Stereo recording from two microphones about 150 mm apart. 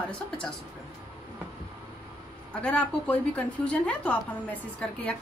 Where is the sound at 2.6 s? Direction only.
10° left (ahead or behind).